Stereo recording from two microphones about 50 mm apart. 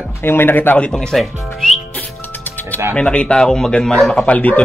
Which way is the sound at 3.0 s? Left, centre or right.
Left.